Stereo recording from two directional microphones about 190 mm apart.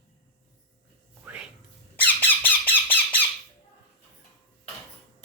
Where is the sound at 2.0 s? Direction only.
10° left (ahead or behind).